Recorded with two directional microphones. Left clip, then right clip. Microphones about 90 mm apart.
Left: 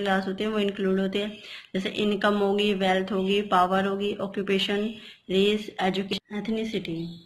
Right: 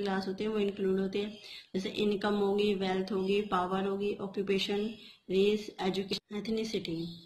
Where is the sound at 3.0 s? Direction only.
5° right (ahead or behind).